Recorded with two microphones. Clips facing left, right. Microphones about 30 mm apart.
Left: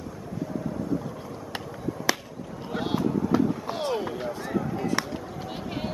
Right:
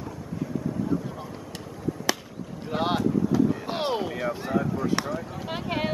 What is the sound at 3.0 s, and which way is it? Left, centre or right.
Vehicle, centre.